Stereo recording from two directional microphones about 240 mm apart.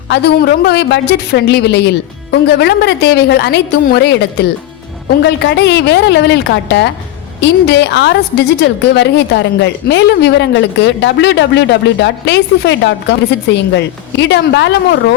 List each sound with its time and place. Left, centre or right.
0.1 s a woman's voice: left